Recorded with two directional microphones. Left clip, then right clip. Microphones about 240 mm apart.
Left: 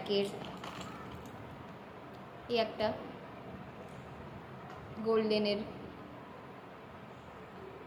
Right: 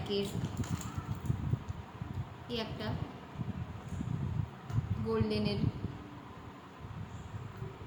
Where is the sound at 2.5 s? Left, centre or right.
Centre.